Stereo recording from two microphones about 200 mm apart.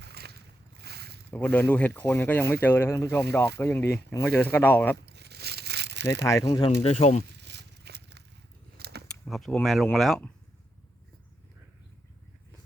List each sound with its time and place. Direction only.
0.0 s boat: 55° right (ahead or behind)
1.3 s speech: 10° left (ahead or behind)
5.0 s a sound: 55° right (ahead or behind)
6.2 s speech: 15° left (ahead or behind); by 7.3 s 35° left (ahead or behind)
7.3 s a sound: 60° right (ahead or behind)
9.2 s speech: centre (ahead or behind)